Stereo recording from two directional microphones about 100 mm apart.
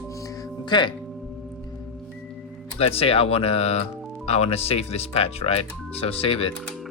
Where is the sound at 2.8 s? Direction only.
75° left (ahead or behind).